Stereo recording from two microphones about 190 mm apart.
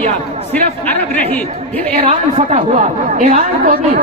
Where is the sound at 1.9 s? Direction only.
30° right (ahead or behind).